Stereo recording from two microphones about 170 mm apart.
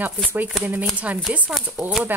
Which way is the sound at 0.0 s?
10° right (ahead or behind).